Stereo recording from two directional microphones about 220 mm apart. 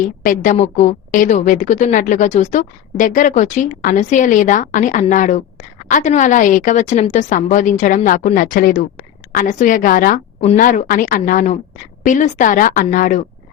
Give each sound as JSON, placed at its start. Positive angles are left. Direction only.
{"t": 0.2, "sound": "a woman's voice", "side_deg": 35}